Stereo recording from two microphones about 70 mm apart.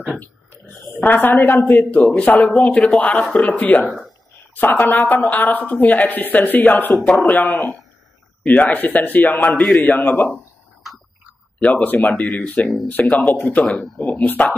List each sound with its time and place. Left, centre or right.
1.0 s speech: left
8.5 s speech: left
10.3 s a sound: centre
11.6 s speech: left
13.7 s speech: centre
13.9 s speech: centre